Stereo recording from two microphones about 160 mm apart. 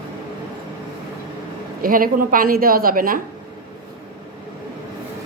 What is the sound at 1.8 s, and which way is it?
A woman's voice, 65° right (ahead or behind).